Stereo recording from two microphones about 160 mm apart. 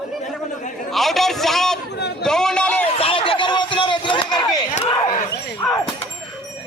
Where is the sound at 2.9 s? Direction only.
35° left (ahead or behind).